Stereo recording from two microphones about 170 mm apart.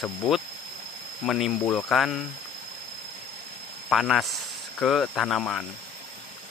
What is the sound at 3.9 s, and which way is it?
Speech, centre (ahead or behind).